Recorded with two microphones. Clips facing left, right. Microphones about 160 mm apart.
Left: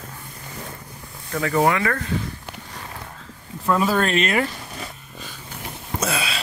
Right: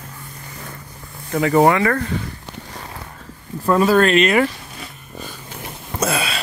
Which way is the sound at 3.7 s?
65° right (ahead or behind).